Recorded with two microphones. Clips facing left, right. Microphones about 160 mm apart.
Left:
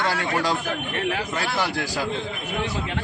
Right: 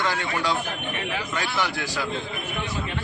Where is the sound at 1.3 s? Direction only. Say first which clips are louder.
Left 2 dB; 35° left (ahead or behind).